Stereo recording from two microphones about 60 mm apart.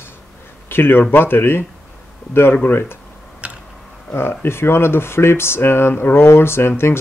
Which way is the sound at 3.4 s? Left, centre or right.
Centre.